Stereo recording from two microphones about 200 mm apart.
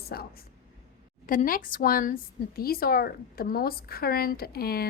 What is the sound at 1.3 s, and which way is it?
A woman's voice, 45° left (ahead or behind).